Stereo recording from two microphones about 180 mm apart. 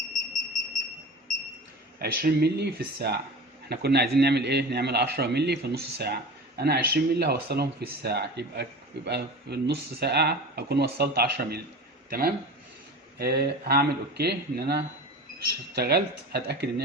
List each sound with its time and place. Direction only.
2.0 s speech: 60° right (ahead or behind)
13.1 s speech: 60° right (ahead or behind)